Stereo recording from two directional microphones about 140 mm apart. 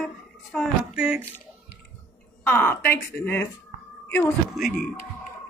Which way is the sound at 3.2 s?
15° left (ahead or behind).